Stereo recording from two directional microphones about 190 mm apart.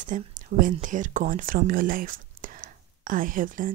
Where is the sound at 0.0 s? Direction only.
45° right (ahead or behind).